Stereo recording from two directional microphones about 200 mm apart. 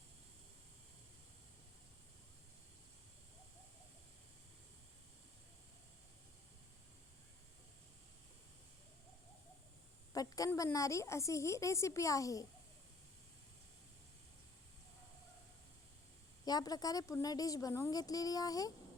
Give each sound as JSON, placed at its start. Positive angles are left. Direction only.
{"t": 10.1, "sound": "a woman's voice", "side_deg": 15}
{"t": 16.5, "sound": "a woman's voice", "side_deg": 20}